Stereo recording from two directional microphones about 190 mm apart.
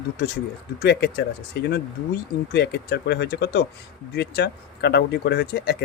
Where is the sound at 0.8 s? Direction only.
60° left (ahead or behind).